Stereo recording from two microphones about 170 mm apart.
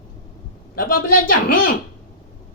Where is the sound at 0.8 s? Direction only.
55° left (ahead or behind).